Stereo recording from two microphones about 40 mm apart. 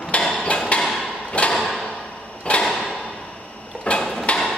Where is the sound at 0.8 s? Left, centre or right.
Centre.